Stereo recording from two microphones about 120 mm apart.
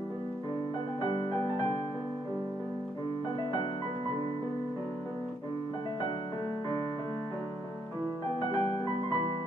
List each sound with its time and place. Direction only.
1.0 s music: 45° left (ahead or behind)
8.5 s music: 40° left (ahead or behind)